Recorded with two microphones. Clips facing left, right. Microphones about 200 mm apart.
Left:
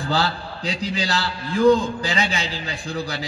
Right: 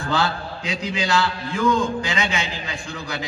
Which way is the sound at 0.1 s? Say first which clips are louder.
Right 1 dB; 35° left (ahead or behind).